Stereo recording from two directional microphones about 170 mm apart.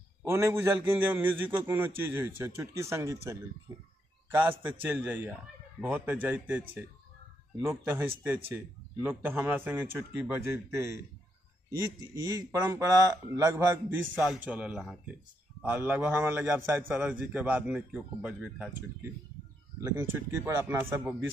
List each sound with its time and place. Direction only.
0.2 s a man's voice: 15° right (ahead or behind)
7.6 s a man's voice: 15° right (ahead or behind)